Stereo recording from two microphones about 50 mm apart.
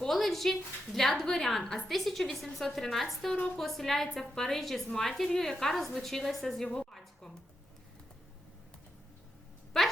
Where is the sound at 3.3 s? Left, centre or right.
Left.